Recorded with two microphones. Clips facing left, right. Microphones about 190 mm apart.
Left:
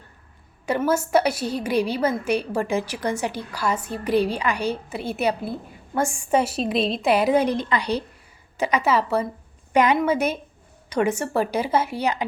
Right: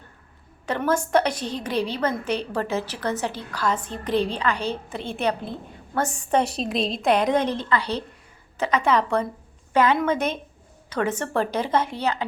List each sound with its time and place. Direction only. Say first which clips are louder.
0.6 s a woman's voice: left 2 dB; 10° left (ahead or behind)
9.7 s a woman's voice: left 1 dB; 15° left (ahead or behind)